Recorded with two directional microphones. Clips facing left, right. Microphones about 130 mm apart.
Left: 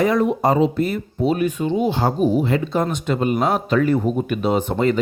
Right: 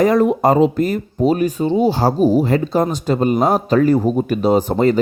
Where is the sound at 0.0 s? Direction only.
45° right (ahead or behind).